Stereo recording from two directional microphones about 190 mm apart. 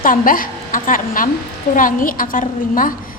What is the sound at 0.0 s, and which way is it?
A woman's voice, 45° left (ahead or behind).